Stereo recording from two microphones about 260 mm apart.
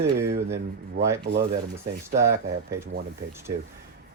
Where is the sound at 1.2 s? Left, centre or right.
Right.